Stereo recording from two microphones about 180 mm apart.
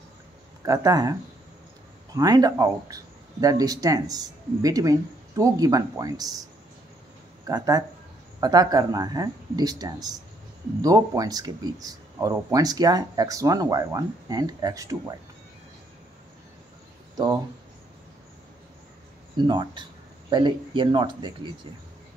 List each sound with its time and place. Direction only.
0.7 s speech: 20° right (ahead or behind)
2.1 s speech: 20° right (ahead or behind)
7.4 s speech: 20° right (ahead or behind)
19.3 s speech: 25° right (ahead or behind)